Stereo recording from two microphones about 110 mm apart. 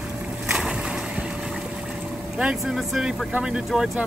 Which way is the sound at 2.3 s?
5° right (ahead or behind).